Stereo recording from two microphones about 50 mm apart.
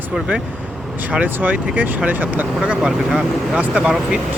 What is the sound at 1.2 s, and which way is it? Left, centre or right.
Speech, right.